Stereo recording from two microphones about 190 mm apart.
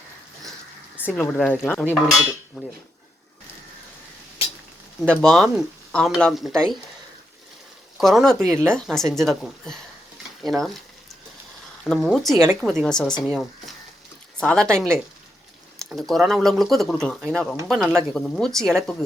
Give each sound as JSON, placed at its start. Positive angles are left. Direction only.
{"t": 0.9, "sound": "cutlery", "side_deg": 10}
{"t": 2.6, "sound": "speech", "side_deg": 0}
{"t": 5.0, "sound": "speech", "side_deg": 0}
{"t": 7.9, "sound": "speech", "side_deg": 0}
{"t": 11.9, "sound": "speech", "side_deg": 0}